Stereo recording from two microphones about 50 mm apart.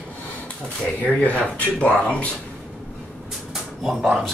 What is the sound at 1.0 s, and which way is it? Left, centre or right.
Speech, left.